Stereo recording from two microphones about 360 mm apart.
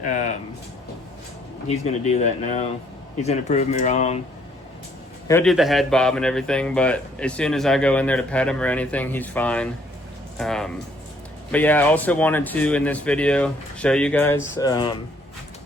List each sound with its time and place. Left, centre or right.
0.0 s speech: centre
1.7 s speech: centre
5.3 s a man's voice: centre